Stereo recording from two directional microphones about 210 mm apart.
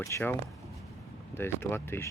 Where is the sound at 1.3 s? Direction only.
10° left (ahead or behind).